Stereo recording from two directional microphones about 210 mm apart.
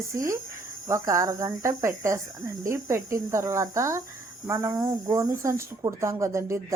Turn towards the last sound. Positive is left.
turn(degrees=-15)  # may be behind; listen again after turning